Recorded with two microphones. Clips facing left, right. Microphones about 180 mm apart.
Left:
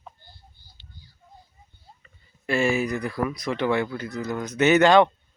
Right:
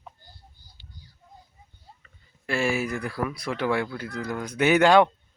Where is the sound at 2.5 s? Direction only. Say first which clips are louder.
Left 3 dB; centre (ahead or behind).